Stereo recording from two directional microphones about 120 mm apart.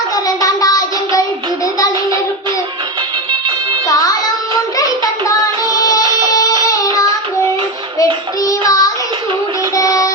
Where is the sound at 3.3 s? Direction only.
45° right (ahead or behind).